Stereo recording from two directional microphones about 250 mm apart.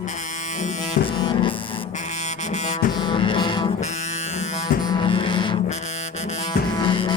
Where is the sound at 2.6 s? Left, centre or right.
Centre.